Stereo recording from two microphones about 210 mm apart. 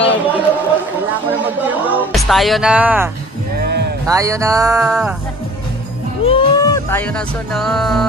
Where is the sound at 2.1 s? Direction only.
Centre (ahead or behind).